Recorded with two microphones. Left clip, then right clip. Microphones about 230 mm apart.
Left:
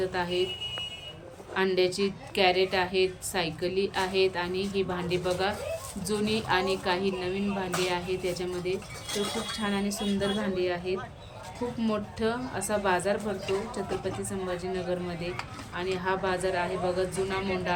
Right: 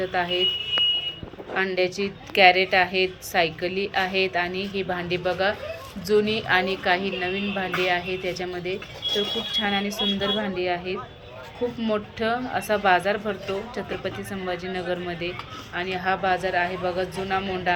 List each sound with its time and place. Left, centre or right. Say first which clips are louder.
0.0 s a woman's voice: right 5 dB; centre
1.5 s a woman's voice: right 2 dB; centre